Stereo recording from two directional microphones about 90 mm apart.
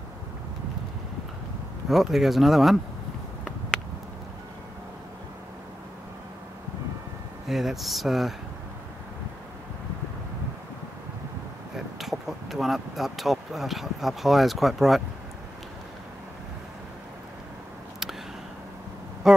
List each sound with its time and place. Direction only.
1.9 s speech: 5° right (ahead or behind)
7.4 s speech: centre (ahead or behind)
11.7 s speech: centre (ahead or behind)
19.2 s a sound: 5° right (ahead or behind)